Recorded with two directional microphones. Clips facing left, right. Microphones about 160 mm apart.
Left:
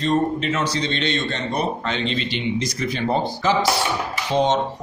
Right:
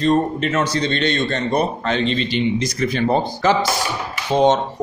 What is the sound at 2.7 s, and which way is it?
A man's voice, 60° right (ahead or behind).